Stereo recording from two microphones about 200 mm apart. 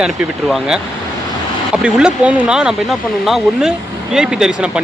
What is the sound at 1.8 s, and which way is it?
Speech, 5° right (ahead or behind).